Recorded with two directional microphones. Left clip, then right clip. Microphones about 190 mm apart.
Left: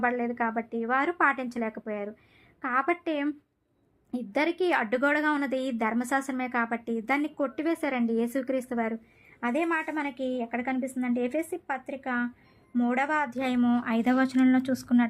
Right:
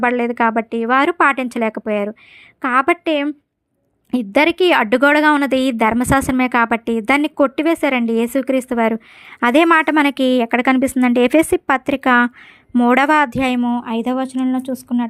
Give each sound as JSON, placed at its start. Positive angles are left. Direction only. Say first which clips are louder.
{"t": 0.0, "sound": "a woman's voice", "louder": "right 12 dB", "side_deg": -40}
{"t": 9.4, "sound": "a woman's voice", "louder": "right 16 dB", "side_deg": -50}
{"t": 13.6, "sound": "speech", "louder": "right 7 dB", "side_deg": -15}